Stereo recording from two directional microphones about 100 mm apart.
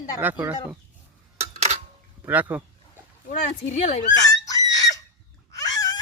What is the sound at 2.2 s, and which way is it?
Speech, 15° right (ahead or behind).